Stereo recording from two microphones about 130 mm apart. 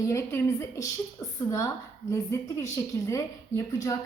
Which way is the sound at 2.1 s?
25° left (ahead or behind).